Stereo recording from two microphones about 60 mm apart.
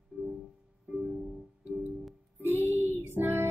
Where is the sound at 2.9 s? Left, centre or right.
Right.